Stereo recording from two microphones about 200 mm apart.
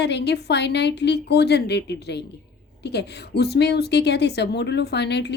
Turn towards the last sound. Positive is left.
turn(degrees=55)  # may be behind; listen again after turning